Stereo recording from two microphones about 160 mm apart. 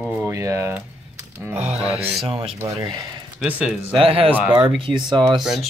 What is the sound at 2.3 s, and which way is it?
Speech, 35° right (ahead or behind).